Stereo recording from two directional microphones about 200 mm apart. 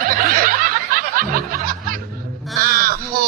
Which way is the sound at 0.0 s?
45° right (ahead or behind).